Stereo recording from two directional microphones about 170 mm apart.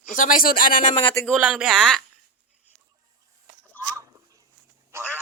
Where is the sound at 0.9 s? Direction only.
30° left (ahead or behind).